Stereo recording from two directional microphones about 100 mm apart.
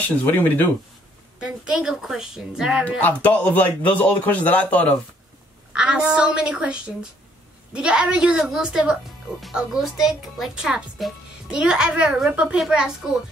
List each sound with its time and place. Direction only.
0.0 s speech: 20° left (ahead or behind)
1.4 s speech: 10° right (ahead or behind)
3.0 s speech: 15° left (ahead or behind)
5.7 s a woman's voice: 10° right (ahead or behind)